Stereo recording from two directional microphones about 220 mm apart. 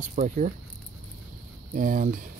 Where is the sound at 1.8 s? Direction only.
35° right (ahead or behind).